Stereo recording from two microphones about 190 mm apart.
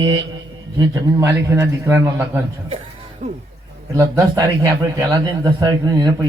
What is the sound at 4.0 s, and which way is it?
A man's voice, 20° right (ahead or behind).